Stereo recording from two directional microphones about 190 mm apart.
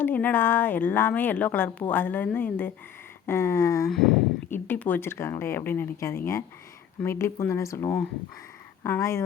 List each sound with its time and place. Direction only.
0.0 s a woman's voice: 10° left (ahead or behind)
3.8 s a woman's voice: centre (ahead or behind)